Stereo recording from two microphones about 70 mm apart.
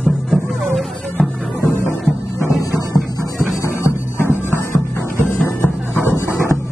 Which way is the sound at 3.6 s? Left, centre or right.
Left.